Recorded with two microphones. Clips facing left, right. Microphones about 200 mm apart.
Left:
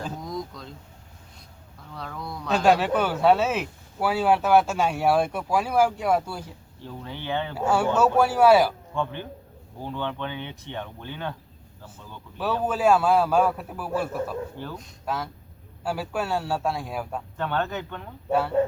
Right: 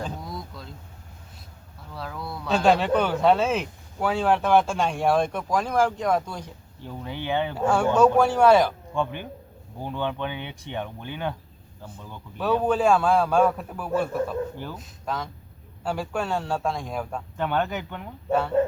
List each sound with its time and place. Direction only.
0.3 s vehicle: 5° right (ahead or behind)
2.0 s a sound: 5° right (ahead or behind)
2.6 s speech: 5° left (ahead or behind)
6.8 s speech: 15° right (ahead or behind)
7.5 s speech: 5° left (ahead or behind)
8.9 s speech: 15° right (ahead or behind)
12.4 s a man's voice: 5° left (ahead or behind)
15.0 s a man's voice: 5° left (ahead or behind)
17.3 s speech: 15° right (ahead or behind)
18.3 s a man's voice: 5° left (ahead or behind)